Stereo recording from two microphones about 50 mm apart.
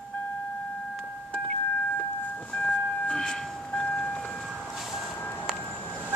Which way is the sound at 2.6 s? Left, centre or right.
Left.